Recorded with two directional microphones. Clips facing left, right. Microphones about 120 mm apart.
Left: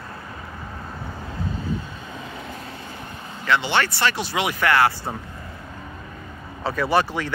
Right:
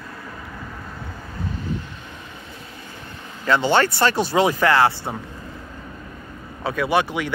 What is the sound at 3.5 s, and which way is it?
Speech, 40° right (ahead or behind).